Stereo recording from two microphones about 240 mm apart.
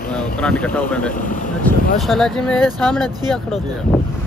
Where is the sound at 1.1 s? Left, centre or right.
Left.